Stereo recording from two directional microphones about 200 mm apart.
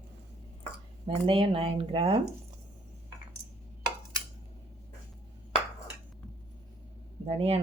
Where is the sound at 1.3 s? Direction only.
25° right (ahead or behind).